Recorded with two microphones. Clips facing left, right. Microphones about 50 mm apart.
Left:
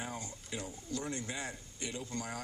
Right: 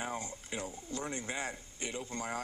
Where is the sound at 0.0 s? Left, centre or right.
Right.